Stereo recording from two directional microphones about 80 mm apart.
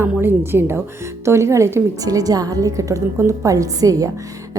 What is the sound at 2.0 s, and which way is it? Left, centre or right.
A woman's voice, right.